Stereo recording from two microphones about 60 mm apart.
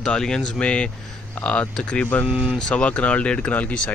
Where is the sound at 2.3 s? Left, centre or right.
Right.